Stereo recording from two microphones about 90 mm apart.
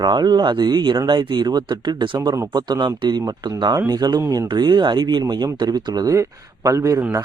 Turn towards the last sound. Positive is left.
turn(degrees=-35)  # may be behind; listen again after turning